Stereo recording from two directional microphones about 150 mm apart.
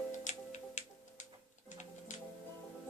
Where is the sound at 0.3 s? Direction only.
55° left (ahead or behind).